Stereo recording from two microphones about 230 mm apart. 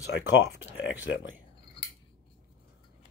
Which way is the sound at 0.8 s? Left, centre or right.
Left.